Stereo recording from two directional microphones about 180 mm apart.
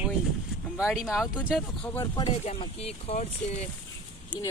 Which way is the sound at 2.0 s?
25° left (ahead or behind).